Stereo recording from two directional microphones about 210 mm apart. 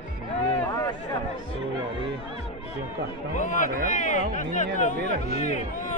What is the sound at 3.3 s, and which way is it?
Speech, 35° left (ahead or behind).